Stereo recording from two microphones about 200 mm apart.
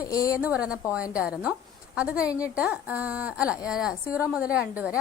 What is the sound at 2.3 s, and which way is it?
Speech, 15° left (ahead or behind).